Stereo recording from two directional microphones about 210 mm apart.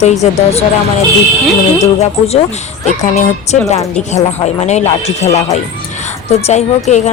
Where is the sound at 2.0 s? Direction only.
30° left (ahead or behind).